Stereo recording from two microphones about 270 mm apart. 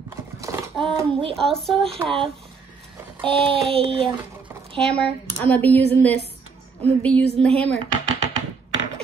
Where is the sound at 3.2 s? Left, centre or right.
Centre.